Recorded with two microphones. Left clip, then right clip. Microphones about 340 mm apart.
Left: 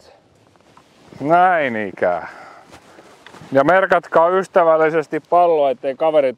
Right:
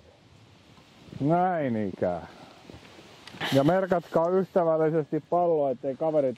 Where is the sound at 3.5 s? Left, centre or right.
Centre.